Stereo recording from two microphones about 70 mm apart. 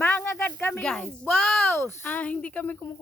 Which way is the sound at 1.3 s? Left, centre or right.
Centre.